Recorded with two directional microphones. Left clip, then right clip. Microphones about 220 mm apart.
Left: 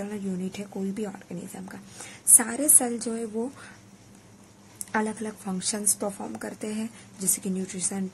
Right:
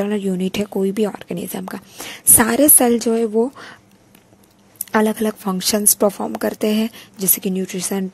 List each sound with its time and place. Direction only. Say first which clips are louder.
0.0 s a woman's voice: right 13 dB; 40° right (ahead or behind)
4.9 s a woman's voice: right 11 dB; 35° right (ahead or behind)